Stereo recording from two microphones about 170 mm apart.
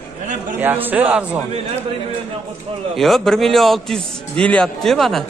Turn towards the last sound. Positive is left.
turn(degrees=0)  # may be behind; listen again after turning